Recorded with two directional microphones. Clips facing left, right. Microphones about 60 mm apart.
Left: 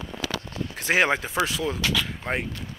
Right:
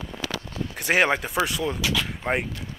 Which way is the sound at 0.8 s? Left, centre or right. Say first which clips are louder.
Right 1 dB; centre.